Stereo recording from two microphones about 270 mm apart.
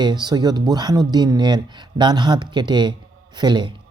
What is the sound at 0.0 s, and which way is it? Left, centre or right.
Speech, centre.